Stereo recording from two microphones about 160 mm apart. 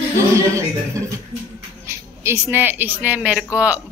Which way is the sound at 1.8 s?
15° right (ahead or behind).